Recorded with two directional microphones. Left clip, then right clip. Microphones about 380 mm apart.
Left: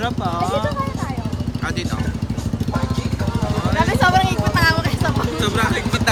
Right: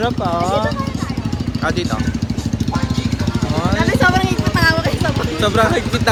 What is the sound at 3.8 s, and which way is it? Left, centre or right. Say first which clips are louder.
Vehicle: even; centre.